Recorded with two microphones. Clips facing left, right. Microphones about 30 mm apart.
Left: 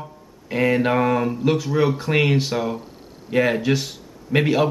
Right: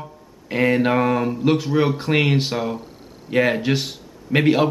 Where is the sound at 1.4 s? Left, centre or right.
Centre.